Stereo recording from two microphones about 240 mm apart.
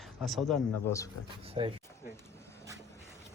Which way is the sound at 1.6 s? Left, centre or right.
Right.